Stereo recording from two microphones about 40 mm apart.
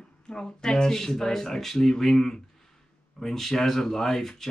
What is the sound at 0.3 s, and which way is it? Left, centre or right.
Speech, centre.